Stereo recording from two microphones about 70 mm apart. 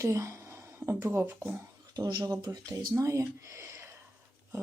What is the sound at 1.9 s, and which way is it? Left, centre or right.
Speech, right.